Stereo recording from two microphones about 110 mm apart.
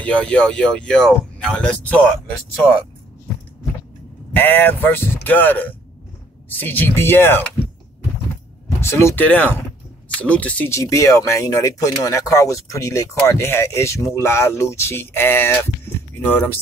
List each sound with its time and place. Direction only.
0.0 s speech: 10° left (ahead or behind)
4.4 s speech: 20° left (ahead or behind)
8.8 s speech: 25° left (ahead or behind)
10.7 s speech: 30° left (ahead or behind)